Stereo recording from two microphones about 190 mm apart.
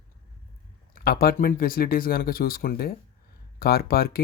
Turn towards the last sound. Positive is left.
turn(degrees=55)  # may be behind; listen again after turning